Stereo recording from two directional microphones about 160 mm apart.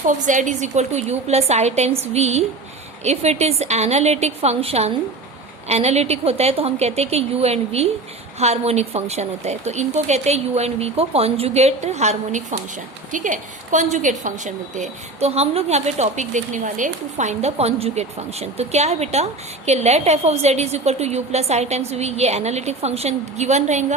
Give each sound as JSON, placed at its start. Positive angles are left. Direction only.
{"t": 0.0, "sound": "a woman's voice", "side_deg": -50}